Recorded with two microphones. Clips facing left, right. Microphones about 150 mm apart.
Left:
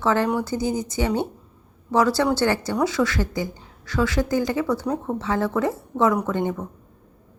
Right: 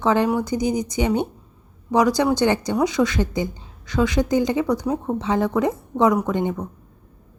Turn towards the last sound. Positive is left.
turn(degrees=-15)  # may be behind; listen again after turning